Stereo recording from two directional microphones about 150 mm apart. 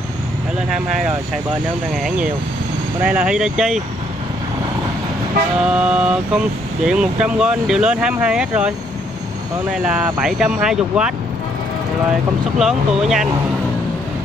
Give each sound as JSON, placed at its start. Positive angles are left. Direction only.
{"t": 3.0, "sound": "speech", "side_deg": -5}
{"t": 5.7, "sound": "speech", "side_deg": -5}
{"t": 10.2, "sound": "speech", "side_deg": -5}
{"t": 12.5, "sound": "speech", "side_deg": -5}